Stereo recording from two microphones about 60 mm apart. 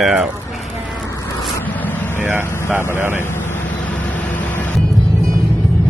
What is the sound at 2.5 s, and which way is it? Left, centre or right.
Speech, left.